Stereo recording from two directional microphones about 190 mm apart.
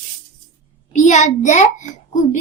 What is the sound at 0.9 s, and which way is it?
Speech, 40° left (ahead or behind).